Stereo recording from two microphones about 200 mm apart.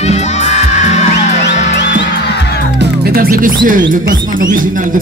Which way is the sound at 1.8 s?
60° left (ahead or behind).